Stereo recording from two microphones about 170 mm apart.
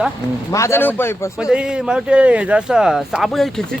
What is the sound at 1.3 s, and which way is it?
Speech, 5° right (ahead or behind).